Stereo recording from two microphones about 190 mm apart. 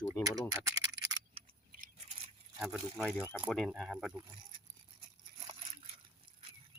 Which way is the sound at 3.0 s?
5° right (ahead or behind).